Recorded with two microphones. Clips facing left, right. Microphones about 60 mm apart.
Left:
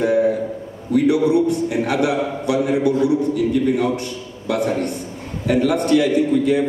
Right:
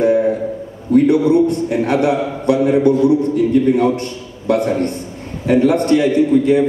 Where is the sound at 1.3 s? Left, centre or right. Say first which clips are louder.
Right 3 dB; right.